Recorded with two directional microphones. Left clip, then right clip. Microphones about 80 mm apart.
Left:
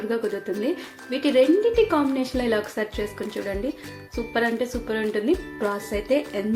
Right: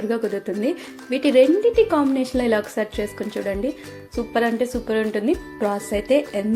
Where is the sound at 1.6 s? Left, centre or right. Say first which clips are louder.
Right 3 dB; right.